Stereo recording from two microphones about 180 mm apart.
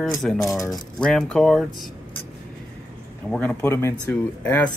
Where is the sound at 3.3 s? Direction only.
10° left (ahead or behind).